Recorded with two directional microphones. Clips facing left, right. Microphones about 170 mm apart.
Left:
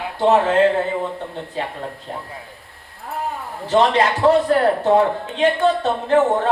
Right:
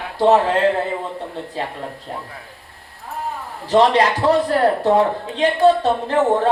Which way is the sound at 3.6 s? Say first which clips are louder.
Right 2 dB; 35° right (ahead or behind).